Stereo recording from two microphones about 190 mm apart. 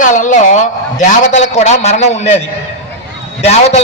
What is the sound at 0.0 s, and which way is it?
A man's voice, 40° left (ahead or behind).